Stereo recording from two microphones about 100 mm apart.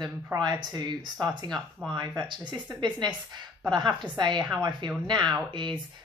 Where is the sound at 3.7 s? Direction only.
45° right (ahead or behind).